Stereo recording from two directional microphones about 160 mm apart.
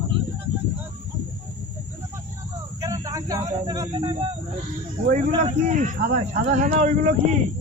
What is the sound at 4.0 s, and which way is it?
Speech, 35° right (ahead or behind).